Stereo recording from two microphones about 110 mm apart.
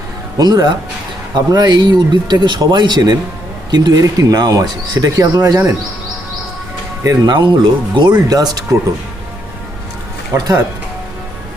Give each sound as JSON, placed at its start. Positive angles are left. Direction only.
{"t": 0.3, "sound": "speech", "side_deg": -40}
{"t": 7.0, "sound": "speech", "side_deg": -35}
{"t": 10.3, "sound": "speech", "side_deg": -35}